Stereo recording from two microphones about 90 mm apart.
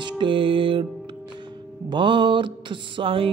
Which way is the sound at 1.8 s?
65° right (ahead or behind).